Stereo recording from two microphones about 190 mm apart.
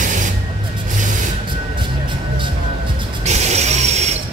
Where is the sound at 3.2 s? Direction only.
35° right (ahead or behind).